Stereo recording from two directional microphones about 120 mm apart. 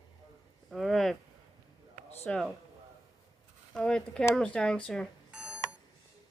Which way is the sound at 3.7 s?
5° left (ahead or behind).